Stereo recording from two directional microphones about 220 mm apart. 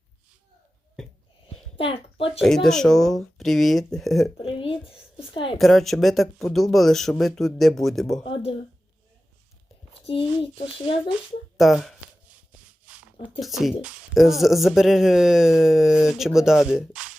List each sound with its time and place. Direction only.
1.7 s a woman's voice: 25° left (ahead or behind)
2.4 s a woman's voice: centre (ahead or behind)
4.4 s a sound: 25° left (ahead or behind)
5.1 s a woman's voice: 25° left (ahead or behind)
5.5 s a woman's voice: centre (ahead or behind)
8.2 s speech: 25° left (ahead or behind)
11.5 s a sound: centre (ahead or behind)
13.4 s a woman's voice: centre (ahead or behind)